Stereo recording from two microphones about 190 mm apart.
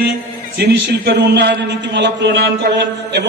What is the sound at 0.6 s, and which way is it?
A man's voice, 60° right (ahead or behind).